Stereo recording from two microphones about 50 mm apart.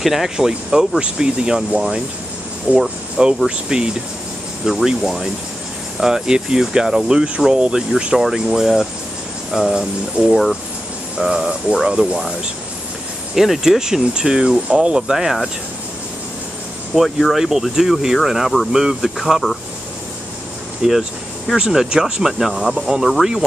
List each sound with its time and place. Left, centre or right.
0.0 s speech: centre
2.7 s speech: right
3.4 s speech: centre
9.8 s speech: centre
10.3 s speech: centre
11.1 s speech: centre
13.3 s speech: centre
16.9 s speech: centre
20.8 s speech: centre